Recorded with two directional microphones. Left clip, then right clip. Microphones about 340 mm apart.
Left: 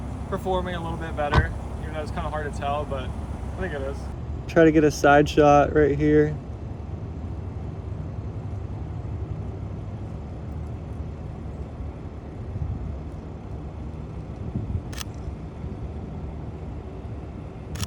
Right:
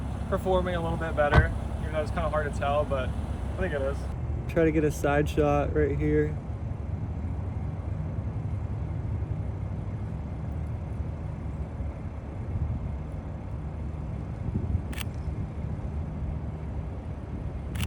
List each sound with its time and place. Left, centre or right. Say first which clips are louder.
0.3 s speech: even; centre
4.5 s speech: left 7 dB; left